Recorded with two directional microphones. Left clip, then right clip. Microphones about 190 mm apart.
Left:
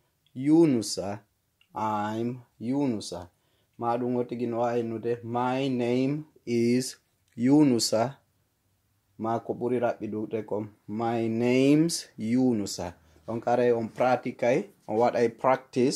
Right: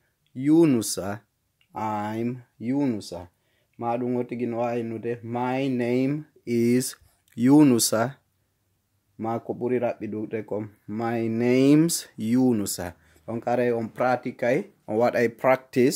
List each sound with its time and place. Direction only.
0.3 s speech: 35° right (ahead or behind)
9.2 s speech: 35° right (ahead or behind); by 15.9 s 50° right (ahead or behind)